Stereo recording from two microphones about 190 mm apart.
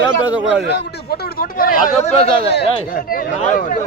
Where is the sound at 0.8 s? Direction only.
55° left (ahead or behind).